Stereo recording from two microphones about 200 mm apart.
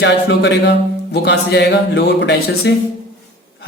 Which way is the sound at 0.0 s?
60° left (ahead or behind).